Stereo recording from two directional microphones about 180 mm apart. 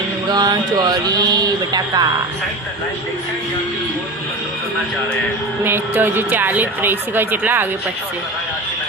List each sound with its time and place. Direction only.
0.3 s speech: 20° right (ahead or behind)
5.6 s speech: 10° right (ahead or behind)